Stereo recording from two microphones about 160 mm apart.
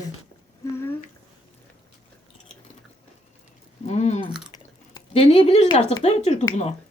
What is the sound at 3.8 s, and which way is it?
Speech, 45° left (ahead or behind).